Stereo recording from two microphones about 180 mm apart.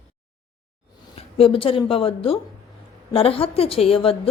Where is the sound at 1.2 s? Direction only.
30° left (ahead or behind).